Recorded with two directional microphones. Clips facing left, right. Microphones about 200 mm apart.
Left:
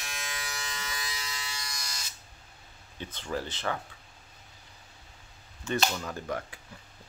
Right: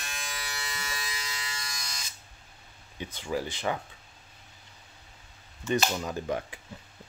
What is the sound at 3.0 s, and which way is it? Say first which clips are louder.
Speech: right 2 dB; 10° right (ahead or behind).